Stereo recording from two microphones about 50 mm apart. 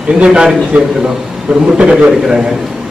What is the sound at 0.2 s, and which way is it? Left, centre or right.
Speech, centre.